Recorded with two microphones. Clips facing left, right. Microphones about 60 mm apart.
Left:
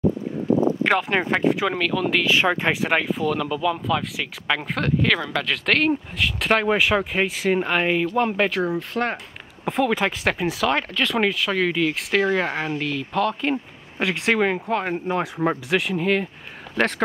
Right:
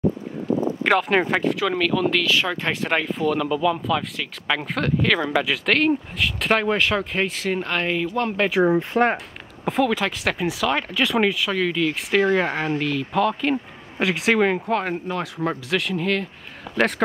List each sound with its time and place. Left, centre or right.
0.8 s speech: centre
1.4 s speech: centre
1.8 s speech: centre
2.2 s speech: left; by 5.2 s centre
5.2 s speech: centre
8.6 s speech: right
9.8 s speech: centre
10.4 s speech: centre
15.0 s speech: centre